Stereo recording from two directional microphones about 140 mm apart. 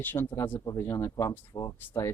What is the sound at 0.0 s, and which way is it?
Speech, 15° left (ahead or behind).